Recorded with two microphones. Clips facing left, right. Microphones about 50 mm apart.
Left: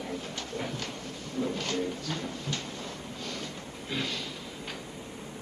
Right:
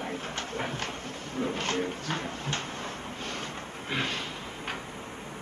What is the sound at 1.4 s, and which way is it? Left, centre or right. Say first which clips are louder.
A man's voice: right 1 dB; right.